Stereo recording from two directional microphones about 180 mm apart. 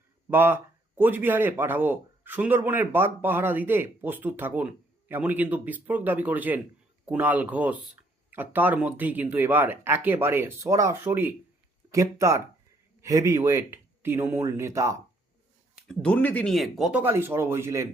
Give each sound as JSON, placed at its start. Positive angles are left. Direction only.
{"t": 0.3, "sound": "speech", "side_deg": -10}
{"t": 15.7, "sound": "speech", "side_deg": 5}